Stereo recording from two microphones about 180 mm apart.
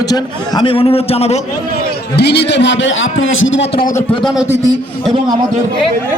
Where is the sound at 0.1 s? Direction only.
25° left (ahead or behind).